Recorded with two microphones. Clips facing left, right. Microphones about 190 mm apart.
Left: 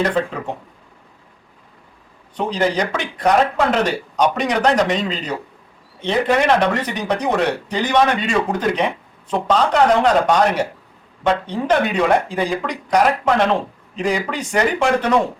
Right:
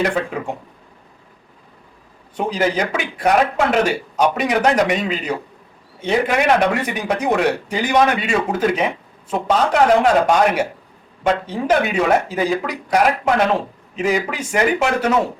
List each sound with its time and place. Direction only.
0.0 s a man's voice: 10° right (ahead or behind)
2.3 s a man's voice: 5° right (ahead or behind)